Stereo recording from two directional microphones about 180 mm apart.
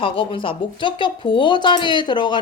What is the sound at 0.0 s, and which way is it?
Speech, 30° left (ahead or behind).